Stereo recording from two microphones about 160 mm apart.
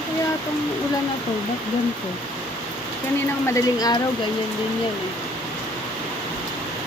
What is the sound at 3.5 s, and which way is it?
Speech, 20° left (ahead or behind).